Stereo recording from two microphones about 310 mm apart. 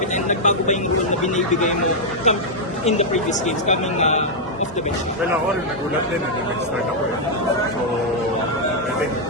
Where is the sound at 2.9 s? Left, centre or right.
Left.